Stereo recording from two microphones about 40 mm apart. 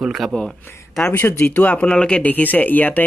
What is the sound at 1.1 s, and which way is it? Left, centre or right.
Speech, left.